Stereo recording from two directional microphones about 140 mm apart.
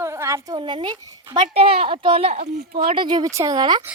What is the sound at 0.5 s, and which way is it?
Speech, 35° right (ahead or behind).